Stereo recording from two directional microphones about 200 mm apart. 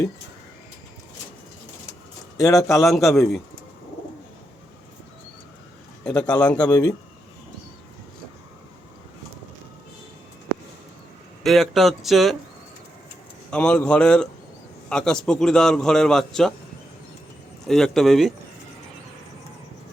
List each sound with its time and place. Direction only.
2.4 s a man's voice: 15° left (ahead or behind)
2.8 s a man's voice: centre (ahead or behind)
6.1 s a man's voice: 5° left (ahead or behind)
6.7 s a man's voice: 20° left (ahead or behind)
11.4 s a man's voice: centre (ahead or behind)
13.5 s a man's voice: 5° left (ahead or behind)
17.7 s a man's voice: centre (ahead or behind)